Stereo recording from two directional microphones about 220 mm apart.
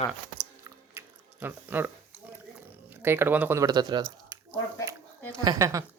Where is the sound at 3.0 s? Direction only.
10° right (ahead or behind).